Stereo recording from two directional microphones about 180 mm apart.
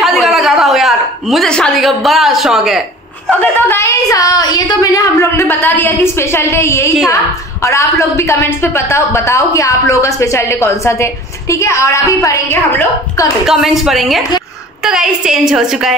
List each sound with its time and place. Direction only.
0.0 s a sound: centre (ahead or behind)
3.3 s a woman's voice: 10° left (ahead or behind)
13.5 s a woman's voice: centre (ahead or behind)